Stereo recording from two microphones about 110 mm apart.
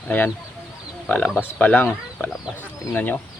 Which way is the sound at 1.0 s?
15° left (ahead or behind).